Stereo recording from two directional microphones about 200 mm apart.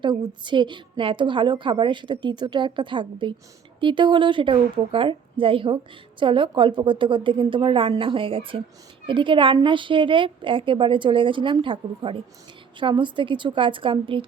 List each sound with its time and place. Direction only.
0.0 s a woman's voice: 25° right (ahead or behind)